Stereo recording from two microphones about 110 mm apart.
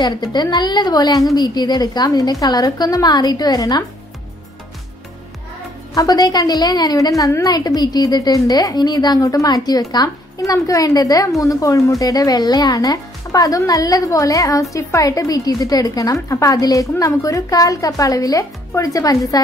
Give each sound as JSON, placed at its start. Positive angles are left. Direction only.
{"t": 0.0, "sound": "speech", "side_deg": 40}
{"t": 5.9, "sound": "speech", "side_deg": 35}